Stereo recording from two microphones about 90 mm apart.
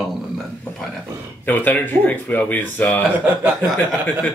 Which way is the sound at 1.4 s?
20° left (ahead or behind).